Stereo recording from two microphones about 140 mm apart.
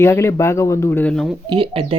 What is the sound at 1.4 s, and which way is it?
Speech, 40° right (ahead or behind).